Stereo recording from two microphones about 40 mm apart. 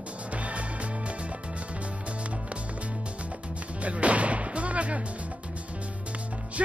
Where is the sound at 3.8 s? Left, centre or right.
Right.